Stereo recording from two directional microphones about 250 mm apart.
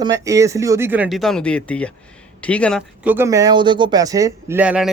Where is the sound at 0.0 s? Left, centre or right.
Centre.